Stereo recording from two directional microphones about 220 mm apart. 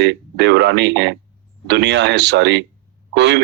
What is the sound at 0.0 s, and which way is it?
Speech, 55° right (ahead or behind).